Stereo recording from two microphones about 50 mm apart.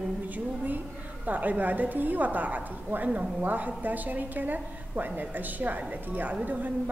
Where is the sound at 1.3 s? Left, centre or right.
Right.